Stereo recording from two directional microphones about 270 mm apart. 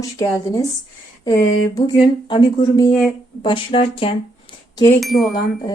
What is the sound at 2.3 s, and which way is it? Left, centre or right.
Speech, centre.